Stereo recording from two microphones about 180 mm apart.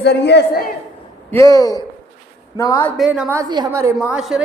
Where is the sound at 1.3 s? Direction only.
15° left (ahead or behind).